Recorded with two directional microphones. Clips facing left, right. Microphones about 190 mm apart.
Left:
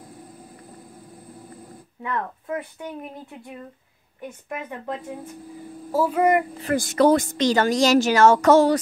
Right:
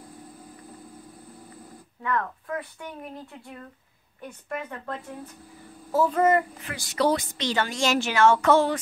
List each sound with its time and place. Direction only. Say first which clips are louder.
2.0 s speech: even; 20° left (ahead or behind)
4.2 s a woman's voice: left 1 dB; 10° left (ahead or behind)
6.6 s speech: left 7 dB; 50° left (ahead or behind)